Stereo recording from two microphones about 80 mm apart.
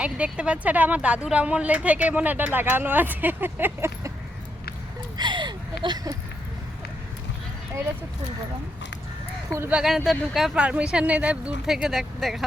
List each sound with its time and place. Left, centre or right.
0.0 s speech: centre; by 4.1 s right
5.1 s a sound: right
9.8 s speech: centre
10.5 s speech: centre